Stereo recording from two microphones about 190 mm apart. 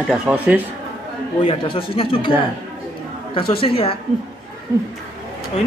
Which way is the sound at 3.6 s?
30° left (ahead or behind).